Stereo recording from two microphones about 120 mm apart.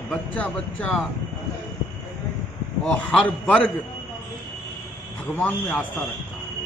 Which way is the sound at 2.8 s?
5° left (ahead or behind).